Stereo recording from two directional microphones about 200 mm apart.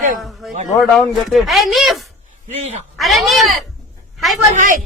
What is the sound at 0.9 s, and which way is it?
A man's voice, centre (ahead or behind).